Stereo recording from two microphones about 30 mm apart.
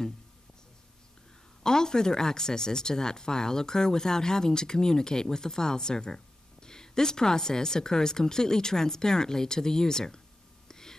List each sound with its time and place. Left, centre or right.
1.6 s speech: left
10.7 s whispering: centre